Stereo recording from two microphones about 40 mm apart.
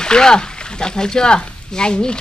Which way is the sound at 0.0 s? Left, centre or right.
Centre.